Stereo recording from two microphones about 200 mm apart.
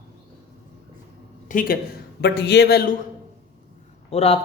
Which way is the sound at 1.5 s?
45° left (ahead or behind).